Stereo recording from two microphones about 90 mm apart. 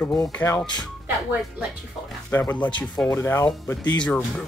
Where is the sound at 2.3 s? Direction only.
20° left (ahead or behind).